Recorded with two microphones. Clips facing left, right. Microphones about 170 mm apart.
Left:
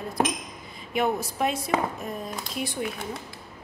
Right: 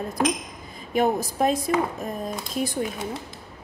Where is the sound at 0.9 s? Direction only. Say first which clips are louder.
Right 3 dB; 40° right (ahead or behind).